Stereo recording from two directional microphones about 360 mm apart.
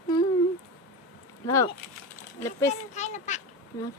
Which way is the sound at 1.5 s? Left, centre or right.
Centre.